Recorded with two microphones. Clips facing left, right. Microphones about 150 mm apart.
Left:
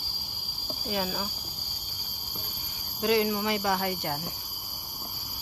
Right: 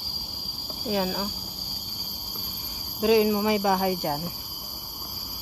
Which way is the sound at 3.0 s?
15° right (ahead or behind).